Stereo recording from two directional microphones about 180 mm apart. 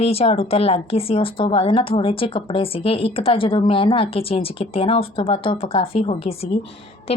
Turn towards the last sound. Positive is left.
turn(degrees=35)  # may be behind; listen again after turning